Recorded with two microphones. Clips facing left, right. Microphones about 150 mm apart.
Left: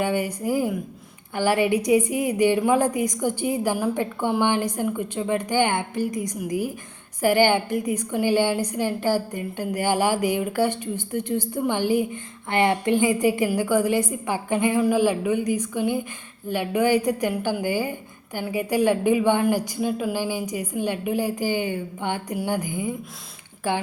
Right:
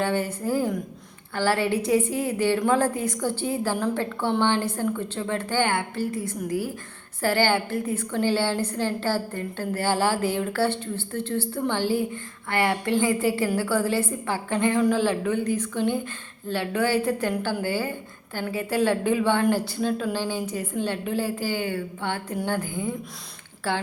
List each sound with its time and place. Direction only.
0.0 s a woman's voice: 15° left (ahead or behind)